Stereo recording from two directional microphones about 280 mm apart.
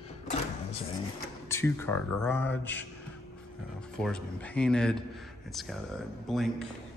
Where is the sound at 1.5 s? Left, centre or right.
Centre.